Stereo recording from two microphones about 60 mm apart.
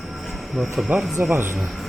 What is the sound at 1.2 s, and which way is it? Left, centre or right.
Speech, right.